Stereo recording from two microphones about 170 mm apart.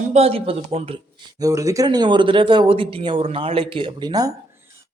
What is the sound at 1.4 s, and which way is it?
Speech, 20° right (ahead or behind).